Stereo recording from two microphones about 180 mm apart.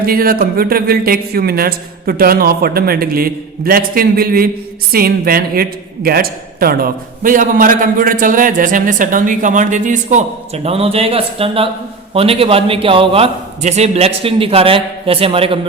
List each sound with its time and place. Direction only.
0.0 s a man's voice: 55° right (ahead or behind); by 15.5 s 30° right (ahead or behind)